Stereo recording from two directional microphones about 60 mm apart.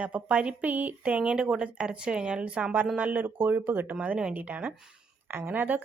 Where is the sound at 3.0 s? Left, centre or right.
Right.